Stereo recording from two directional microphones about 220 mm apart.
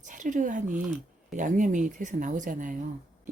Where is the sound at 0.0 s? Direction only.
35° right (ahead or behind).